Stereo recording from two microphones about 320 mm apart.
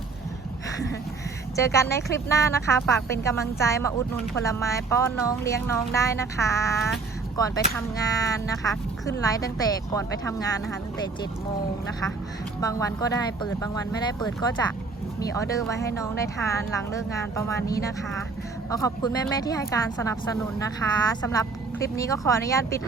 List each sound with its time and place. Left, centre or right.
1.5 s speech: centre
12.5 s speech: centre